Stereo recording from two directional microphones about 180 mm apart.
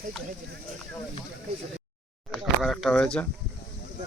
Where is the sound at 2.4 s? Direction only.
Centre (ahead or behind).